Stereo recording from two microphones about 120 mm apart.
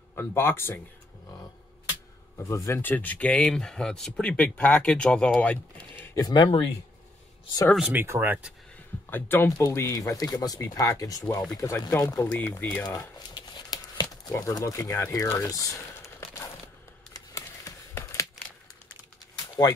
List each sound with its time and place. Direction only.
0.1 s speech: 20° left (ahead or behind)
2.5 s speech: 25° left (ahead or behind)
6.1 s speech: 35° left (ahead or behind)
7.9 s speech: 15° right (ahead or behind)
9.1 s speech: 15° left (ahead or behind)
9.6 s speech: 30° left (ahead or behind)
12.8 s a sound: 35° left (ahead or behind)
14.3 s speech: 25° left (ahead or behind)
17.3 s a sound: 25° left (ahead or behind)